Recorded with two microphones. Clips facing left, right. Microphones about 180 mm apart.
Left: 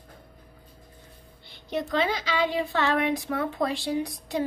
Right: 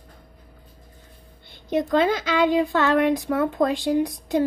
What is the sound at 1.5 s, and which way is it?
A woman's voice, 50° right (ahead or behind).